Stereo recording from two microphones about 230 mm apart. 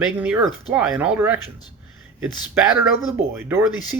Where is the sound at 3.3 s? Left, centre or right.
Centre.